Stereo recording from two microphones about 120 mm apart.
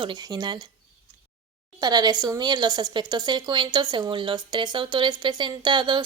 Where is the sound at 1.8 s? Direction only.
35° right (ahead or behind).